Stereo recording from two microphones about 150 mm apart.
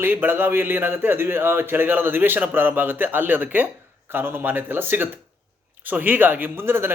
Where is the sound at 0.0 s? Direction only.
15° right (ahead or behind).